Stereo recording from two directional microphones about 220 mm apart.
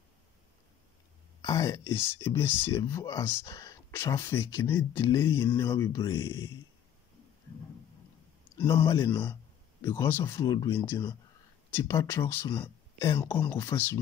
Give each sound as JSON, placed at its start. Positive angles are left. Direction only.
{"t": 1.4, "sound": "speech", "side_deg": 15}
{"t": 8.8, "sound": "speech", "side_deg": 20}
{"t": 9.1, "sound": "speech", "side_deg": 10}